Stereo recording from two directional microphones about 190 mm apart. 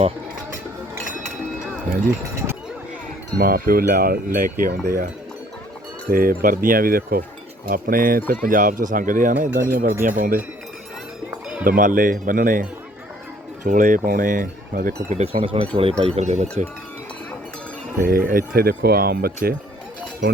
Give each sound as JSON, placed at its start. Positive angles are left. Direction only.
{"t": 2.0, "sound": "speech", "side_deg": -15}
{"t": 3.3, "sound": "speech", "side_deg": -50}
{"t": 6.1, "sound": "speech", "side_deg": -50}
{"t": 11.3, "sound": "cowbell", "side_deg": -5}
{"t": 11.6, "sound": "speech", "side_deg": -45}
{"t": 13.7, "sound": "speech", "side_deg": -45}
{"t": 15.1, "sound": "speech", "side_deg": -30}
{"t": 18.0, "sound": "speech", "side_deg": -50}